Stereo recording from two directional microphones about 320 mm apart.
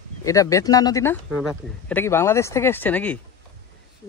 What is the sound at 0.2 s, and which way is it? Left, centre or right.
Speech, centre.